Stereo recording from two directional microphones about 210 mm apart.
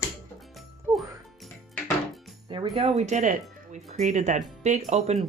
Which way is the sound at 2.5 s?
25° right (ahead or behind).